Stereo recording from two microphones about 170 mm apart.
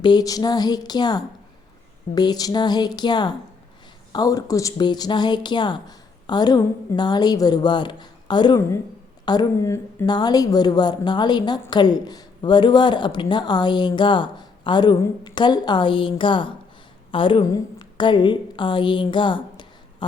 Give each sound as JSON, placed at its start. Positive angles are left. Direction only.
{"t": 0.0, "sound": "a woman's voice", "side_deg": 25}